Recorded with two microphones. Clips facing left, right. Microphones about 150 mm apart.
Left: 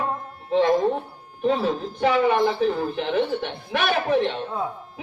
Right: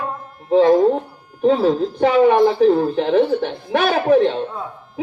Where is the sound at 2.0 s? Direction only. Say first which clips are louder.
Right 6 dB; 40° right (ahead or behind).